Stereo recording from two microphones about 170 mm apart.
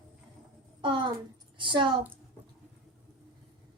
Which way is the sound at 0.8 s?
30° right (ahead or behind).